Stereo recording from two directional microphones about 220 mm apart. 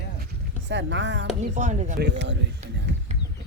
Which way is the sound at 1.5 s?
35° right (ahead or behind).